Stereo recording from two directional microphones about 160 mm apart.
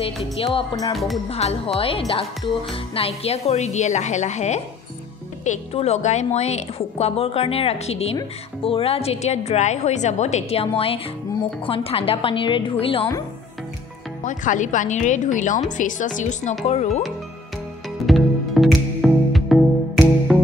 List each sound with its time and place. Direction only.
0.0 s speech: 35° left (ahead or behind)
0.9 s speech: centre (ahead or behind)
1.3 s a woman's voice: 40° left (ahead or behind)
14.2 s a woman's voice: 50° left (ahead or behind)
18.0 s music: centre (ahead or behind)